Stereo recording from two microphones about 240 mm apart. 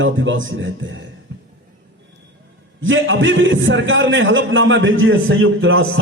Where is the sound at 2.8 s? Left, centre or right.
Right.